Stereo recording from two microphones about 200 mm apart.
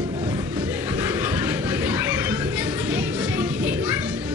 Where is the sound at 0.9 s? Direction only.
10° right (ahead or behind).